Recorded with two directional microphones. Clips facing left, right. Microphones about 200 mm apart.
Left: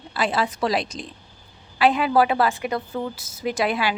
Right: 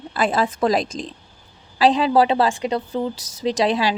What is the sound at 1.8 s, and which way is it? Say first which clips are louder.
A woman's voice: right 2 dB; 30° right (ahead or behind).